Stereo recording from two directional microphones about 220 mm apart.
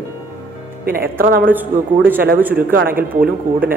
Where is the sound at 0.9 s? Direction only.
40° right (ahead or behind).